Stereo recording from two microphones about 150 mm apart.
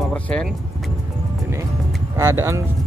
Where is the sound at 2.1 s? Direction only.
20° right (ahead or behind).